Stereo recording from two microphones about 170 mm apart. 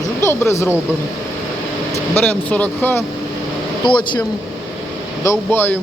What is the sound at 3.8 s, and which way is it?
Speech, 25° left (ahead or behind).